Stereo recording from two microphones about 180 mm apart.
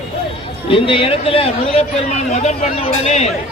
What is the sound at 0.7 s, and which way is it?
Speech, 30° left (ahead or behind).